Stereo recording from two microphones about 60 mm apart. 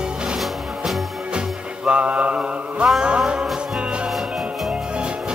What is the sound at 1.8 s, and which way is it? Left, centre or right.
Mantra, centre.